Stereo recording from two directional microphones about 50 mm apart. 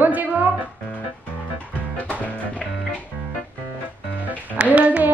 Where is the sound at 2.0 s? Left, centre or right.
Left.